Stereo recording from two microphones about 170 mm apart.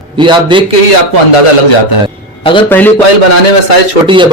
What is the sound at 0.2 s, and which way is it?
Speech, 30° right (ahead or behind).